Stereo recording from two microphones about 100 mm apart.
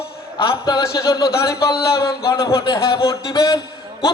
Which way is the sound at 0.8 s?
30° left (ahead or behind).